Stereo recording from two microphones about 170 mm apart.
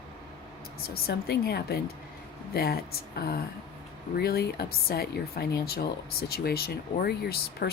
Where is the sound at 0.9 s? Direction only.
65° left (ahead or behind).